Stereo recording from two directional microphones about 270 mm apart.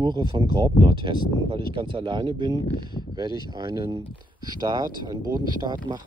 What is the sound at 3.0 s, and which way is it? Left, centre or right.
Speech, centre.